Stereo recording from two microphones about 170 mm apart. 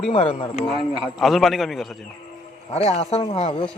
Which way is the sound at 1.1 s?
Centre (ahead or behind).